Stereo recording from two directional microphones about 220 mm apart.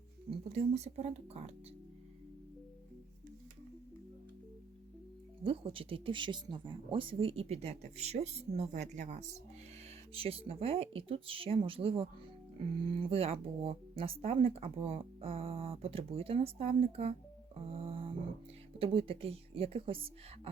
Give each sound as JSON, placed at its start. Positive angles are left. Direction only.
{"t": 0.3, "sound": "speech", "side_deg": -30}
{"t": 5.4, "sound": "speech", "side_deg": -25}